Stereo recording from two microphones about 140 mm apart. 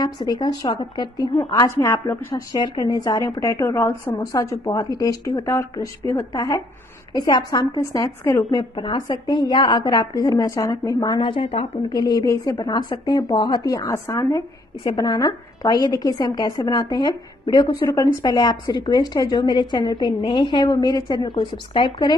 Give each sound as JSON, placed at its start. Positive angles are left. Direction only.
{"t": 0.0, "sound": "a woman's voice", "side_deg": 30}
{"t": 14.8, "sound": "a woman's voice", "side_deg": 30}
{"t": 17.7, "sound": "a woman's voice", "side_deg": 20}